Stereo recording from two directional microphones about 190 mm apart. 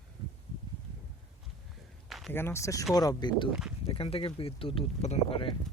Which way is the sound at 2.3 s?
10° left (ahead or behind).